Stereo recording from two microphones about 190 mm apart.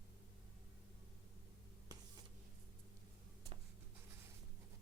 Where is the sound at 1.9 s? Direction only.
20° right (ahead or behind).